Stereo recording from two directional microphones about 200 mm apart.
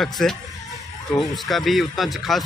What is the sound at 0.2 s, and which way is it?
Speech, centre (ahead or behind).